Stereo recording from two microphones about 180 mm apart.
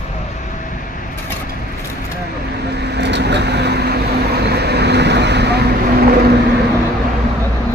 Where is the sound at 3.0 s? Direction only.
70° right (ahead or behind).